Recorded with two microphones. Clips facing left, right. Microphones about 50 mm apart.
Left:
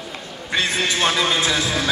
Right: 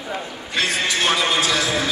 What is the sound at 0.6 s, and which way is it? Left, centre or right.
Music, left.